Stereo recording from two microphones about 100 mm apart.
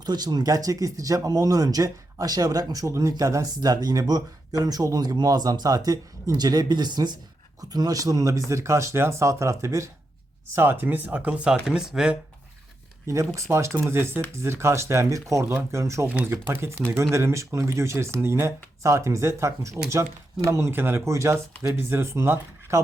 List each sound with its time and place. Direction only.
0.0 s speech: 45° right (ahead or behind); by 12.1 s 5° right (ahead or behind)
13.3 s speech: 30° right (ahead or behind)
16.0 s speech: 10° right (ahead or behind)
16.3 s speech: 25° right (ahead or behind)